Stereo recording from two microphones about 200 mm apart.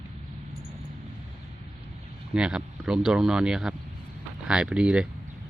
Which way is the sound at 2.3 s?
5° right (ahead or behind).